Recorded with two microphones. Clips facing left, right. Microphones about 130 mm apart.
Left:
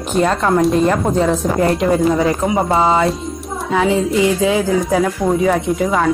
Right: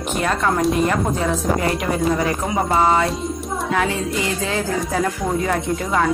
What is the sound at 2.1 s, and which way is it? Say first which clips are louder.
Speech: left 5 dB; 20° left (ahead or behind).